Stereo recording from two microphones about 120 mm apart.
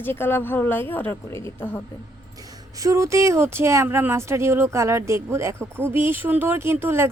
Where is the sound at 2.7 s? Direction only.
25° right (ahead or behind).